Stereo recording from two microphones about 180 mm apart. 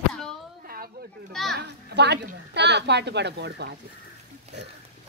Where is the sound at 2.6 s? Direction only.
70° right (ahead or behind).